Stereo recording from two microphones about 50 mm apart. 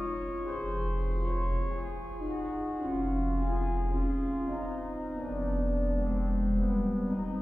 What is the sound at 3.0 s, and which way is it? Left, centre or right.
Music, left.